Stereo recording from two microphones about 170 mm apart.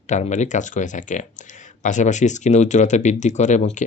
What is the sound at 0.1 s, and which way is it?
Speech, 45° left (ahead or behind).